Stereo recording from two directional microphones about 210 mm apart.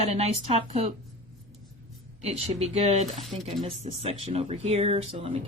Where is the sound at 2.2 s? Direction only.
30° right (ahead or behind).